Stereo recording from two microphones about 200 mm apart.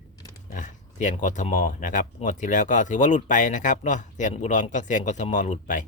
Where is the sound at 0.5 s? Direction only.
40° left (ahead or behind).